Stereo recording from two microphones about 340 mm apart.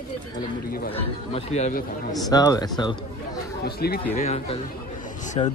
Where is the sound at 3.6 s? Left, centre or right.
Left.